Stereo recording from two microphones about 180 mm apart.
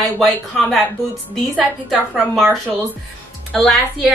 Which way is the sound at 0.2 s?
Centre (ahead or behind).